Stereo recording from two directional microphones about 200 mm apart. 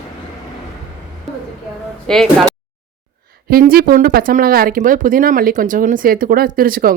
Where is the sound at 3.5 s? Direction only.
45° right (ahead or behind).